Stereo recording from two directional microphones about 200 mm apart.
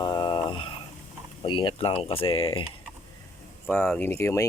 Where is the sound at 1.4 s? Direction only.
25° left (ahead or behind).